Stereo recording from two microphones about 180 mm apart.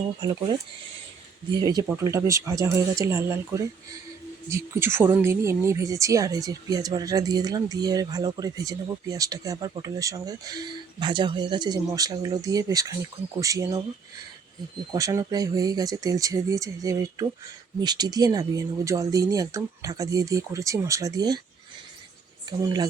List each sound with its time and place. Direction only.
0.2 s speech: 25° right (ahead or behind)
1.5 s speech: 20° right (ahead or behind)
14.9 s speech: 20° right (ahead or behind)
22.4 s speech: 20° right (ahead or behind)